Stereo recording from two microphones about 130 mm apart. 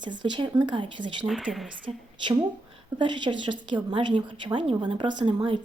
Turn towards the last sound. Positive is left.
turn(degrees=-40)  # may be behind; listen again after turning